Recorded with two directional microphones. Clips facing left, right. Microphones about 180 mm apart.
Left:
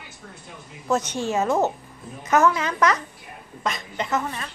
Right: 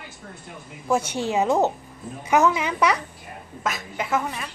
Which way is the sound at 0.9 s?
10° right (ahead or behind).